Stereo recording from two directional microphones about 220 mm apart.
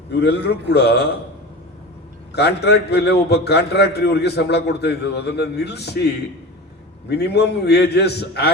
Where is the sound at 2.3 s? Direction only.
50° left (ahead or behind).